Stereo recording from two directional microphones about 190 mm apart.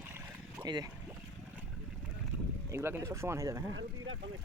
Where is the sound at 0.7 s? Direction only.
20° right (ahead or behind).